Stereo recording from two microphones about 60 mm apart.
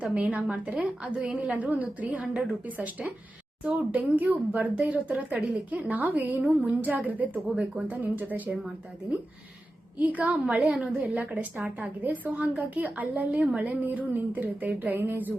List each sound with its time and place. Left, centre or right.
0.0 s a woman's voice: right
7.4 s speech: centre
7.9 s a woman's voice: right
10.0 s a woman's voice: right